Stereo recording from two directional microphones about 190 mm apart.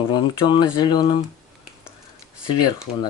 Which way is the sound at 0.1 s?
25° left (ahead or behind).